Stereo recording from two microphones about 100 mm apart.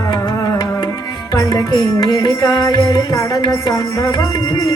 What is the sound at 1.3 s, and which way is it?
Music, 40° left (ahead or behind).